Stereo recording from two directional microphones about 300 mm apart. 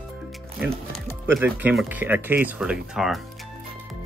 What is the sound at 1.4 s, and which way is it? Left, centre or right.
Speech, centre.